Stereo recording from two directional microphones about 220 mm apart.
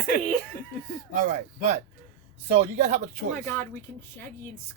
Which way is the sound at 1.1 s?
35° right (ahead or behind).